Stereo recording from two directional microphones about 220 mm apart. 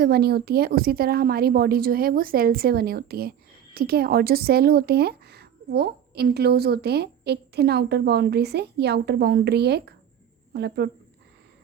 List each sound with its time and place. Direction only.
0.0 s speech: 45° right (ahead or behind)